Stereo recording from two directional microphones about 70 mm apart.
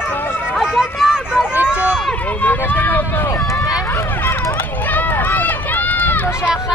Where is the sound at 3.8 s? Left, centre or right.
Left.